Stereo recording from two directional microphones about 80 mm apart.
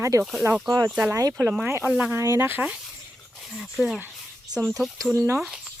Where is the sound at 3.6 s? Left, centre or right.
Centre.